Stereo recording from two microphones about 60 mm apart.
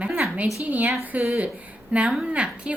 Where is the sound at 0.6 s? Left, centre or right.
Right.